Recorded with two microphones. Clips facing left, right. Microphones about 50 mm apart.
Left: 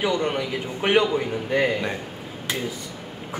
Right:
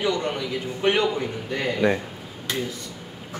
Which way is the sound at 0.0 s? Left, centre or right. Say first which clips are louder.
Left 2 dB; centre.